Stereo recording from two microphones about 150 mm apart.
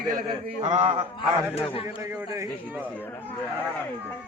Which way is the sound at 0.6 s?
45° right (ahead or behind).